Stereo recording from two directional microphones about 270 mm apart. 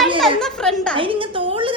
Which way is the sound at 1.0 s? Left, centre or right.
Centre.